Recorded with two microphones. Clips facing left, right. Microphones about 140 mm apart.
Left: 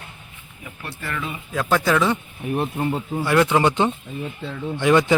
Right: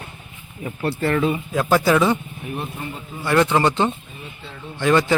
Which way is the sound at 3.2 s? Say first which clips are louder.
Right 1 dB; 5° left (ahead or behind).